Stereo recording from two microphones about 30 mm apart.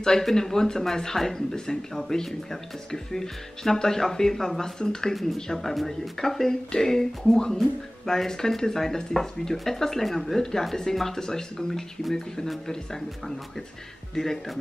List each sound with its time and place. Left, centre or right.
0.2 s speech: centre
5.5 s speech: centre
14.1 s speech: centre